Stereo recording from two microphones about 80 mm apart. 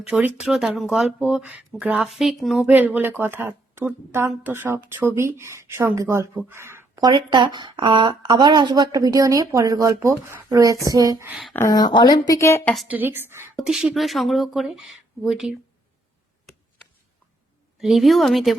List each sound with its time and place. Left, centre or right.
0.1 s a woman's voice: right
0.3 s speech: centre
1.3 s speech: centre
2.0 s speech: centre
2.6 s a woman's voice: right
6.9 s speech: right
7.3 s a woman's voice: right
10.6 s a woman's voice: right
11.7 s speech: left
12.4 s a woman's voice: left
12.9 s a woman's voice: right
13.6 s speech: centre
17.7 s speech: centre